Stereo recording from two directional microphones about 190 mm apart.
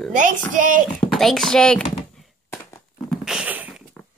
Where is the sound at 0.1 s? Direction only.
45° right (ahead or behind).